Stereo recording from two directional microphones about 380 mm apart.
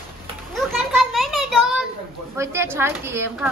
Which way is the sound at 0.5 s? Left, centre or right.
Centre.